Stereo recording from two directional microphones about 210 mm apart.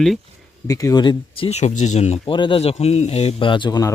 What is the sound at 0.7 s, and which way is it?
Speech, 15° left (ahead or behind).